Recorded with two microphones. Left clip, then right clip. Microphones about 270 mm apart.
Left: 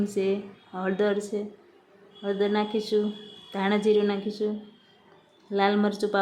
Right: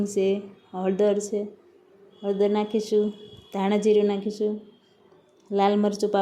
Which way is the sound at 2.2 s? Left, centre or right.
Centre.